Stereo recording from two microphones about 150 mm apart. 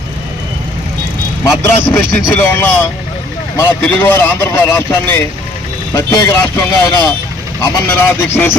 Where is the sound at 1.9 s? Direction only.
15° left (ahead or behind).